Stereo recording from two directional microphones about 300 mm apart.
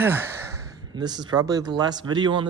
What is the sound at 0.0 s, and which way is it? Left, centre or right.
Speech, centre.